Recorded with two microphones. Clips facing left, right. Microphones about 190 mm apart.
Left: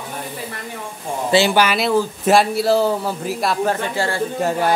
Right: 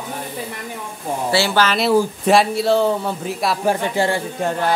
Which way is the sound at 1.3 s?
20° left (ahead or behind).